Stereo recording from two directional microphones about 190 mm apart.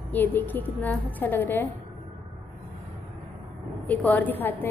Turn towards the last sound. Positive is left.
turn(degrees=10)  # may be behind; listen again after turning